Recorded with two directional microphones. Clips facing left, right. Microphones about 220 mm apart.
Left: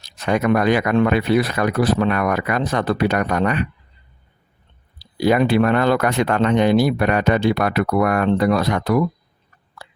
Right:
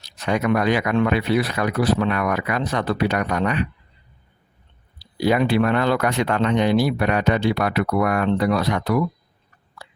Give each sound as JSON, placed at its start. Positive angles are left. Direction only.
{"t": 0.0, "sound": "speech", "side_deg": 50}
{"t": 4.9, "sound": "speech", "side_deg": 50}